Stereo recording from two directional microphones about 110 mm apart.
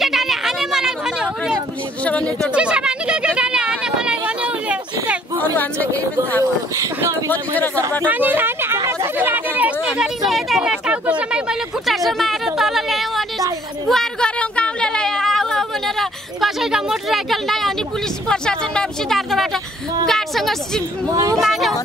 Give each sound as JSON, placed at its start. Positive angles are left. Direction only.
{"t": 0.0, "sound": "chatter", "side_deg": 0}
{"t": 2.0, "sound": "speech", "side_deg": 10}
{"t": 2.5, "sound": "a sound", "side_deg": -10}
{"t": 5.4, "sound": "a sound", "side_deg": 15}
{"t": 6.8, "sound": "speech", "side_deg": -25}
{"t": 7.2, "sound": "speech", "side_deg": 15}
{"t": 8.0, "sound": "chatter", "side_deg": -15}
{"t": 13.8, "sound": "a sound", "side_deg": 5}
{"t": 18.3, "sound": "speech", "side_deg": 5}
{"t": 21.1, "sound": "speech", "side_deg": -30}
{"t": 21.4, "sound": "speech", "side_deg": 0}